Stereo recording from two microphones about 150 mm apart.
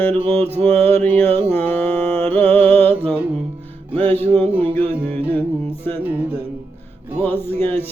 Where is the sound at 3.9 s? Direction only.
45° right (ahead or behind).